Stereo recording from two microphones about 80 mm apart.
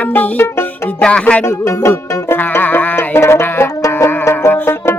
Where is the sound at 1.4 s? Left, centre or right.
Left.